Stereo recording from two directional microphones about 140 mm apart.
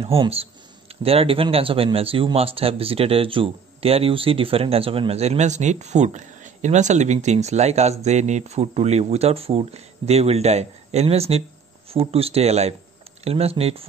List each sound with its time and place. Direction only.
0.0 s speech: 45° right (ahead or behind)